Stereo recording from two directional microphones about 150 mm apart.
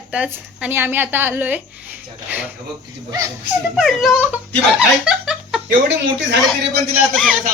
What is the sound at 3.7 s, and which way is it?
Speech, centre (ahead or behind).